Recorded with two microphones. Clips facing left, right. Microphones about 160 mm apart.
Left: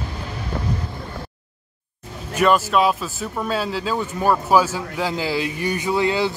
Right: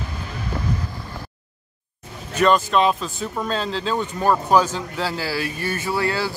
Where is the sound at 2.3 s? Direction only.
5° left (ahead or behind).